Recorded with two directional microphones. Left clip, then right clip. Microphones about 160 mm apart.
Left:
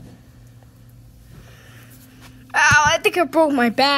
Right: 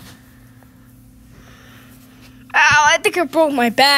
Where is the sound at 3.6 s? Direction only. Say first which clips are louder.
Right 4 dB; 10° right (ahead or behind).